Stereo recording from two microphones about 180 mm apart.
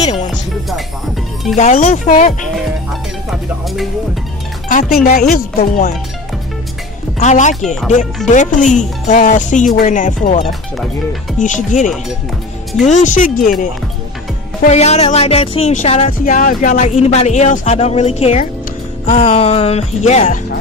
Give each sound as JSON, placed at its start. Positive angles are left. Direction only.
{"t": 1.6, "sound": "music", "side_deg": 35}
{"t": 2.5, "sound": "speech", "side_deg": 0}
{"t": 4.6, "sound": "speech", "side_deg": 45}
{"t": 7.2, "sound": "music", "side_deg": 40}
{"t": 7.6, "sound": "speech", "side_deg": 0}
{"t": 8.3, "sound": "speech", "side_deg": 45}
{"t": 14.6, "sound": "music", "side_deg": 40}
{"t": 16.8, "sound": "music", "side_deg": 35}